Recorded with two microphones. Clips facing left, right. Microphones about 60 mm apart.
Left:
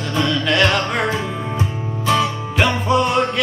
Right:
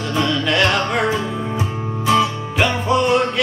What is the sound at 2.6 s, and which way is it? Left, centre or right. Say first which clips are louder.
Music: even; centre.